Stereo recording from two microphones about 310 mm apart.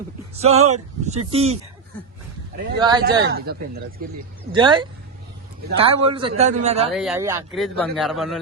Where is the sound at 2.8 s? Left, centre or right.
Centre.